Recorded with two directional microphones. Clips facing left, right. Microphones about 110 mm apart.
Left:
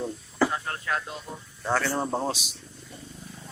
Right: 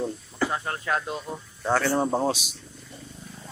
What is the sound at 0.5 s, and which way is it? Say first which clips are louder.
Speech: right 2 dB; 30° right (ahead or behind).